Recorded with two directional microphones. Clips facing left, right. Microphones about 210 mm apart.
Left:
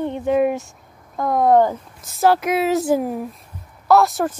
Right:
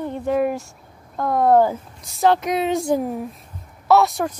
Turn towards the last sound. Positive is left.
turn(degrees=0)  # may be behind; listen again after turning